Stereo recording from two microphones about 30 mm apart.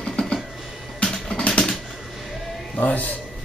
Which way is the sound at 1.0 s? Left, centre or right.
Centre.